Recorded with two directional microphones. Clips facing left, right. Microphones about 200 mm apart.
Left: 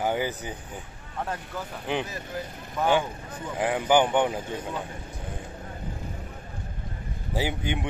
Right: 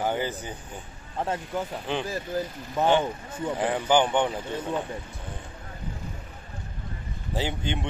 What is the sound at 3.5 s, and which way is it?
Speech, 10° left (ahead or behind).